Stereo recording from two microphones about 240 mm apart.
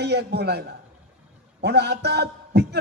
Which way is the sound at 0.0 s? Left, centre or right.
Right.